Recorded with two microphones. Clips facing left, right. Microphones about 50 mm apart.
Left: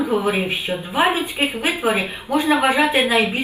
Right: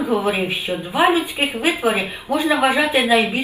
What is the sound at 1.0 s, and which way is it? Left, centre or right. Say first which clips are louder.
Speech: right 4 dB; left.